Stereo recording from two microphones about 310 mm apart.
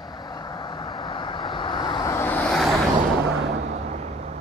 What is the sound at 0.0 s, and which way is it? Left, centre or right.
Vehicle, centre.